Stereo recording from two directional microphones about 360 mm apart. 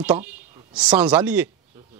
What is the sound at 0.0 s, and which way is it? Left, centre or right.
Speech, centre.